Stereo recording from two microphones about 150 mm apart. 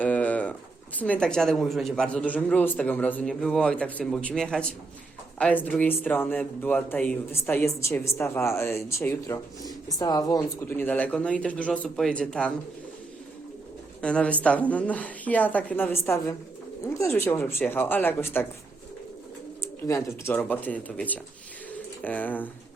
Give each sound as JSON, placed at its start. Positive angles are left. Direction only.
{"t": 0.0, "sound": "pigeon", "side_deg": 10}
{"t": 0.9, "sound": "speech", "side_deg": 10}
{"t": 10.8, "sound": "speech", "side_deg": 10}
{"t": 14.0, "sound": "speech", "side_deg": 5}
{"t": 19.6, "sound": "speech", "side_deg": 20}